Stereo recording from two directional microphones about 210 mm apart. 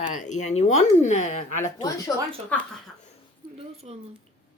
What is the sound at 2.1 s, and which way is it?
Speech, 15° left (ahead or behind).